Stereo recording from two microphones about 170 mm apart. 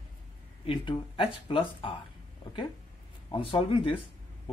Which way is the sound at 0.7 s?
30° left (ahead or behind).